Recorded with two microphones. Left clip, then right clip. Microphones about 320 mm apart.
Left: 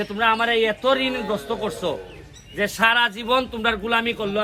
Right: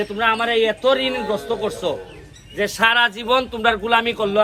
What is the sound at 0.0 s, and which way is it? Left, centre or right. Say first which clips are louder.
A man's voice: right 1 dB; centre.